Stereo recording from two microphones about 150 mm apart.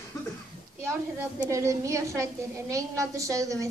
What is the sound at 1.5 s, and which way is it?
A woman's voice, 20° right (ahead or behind).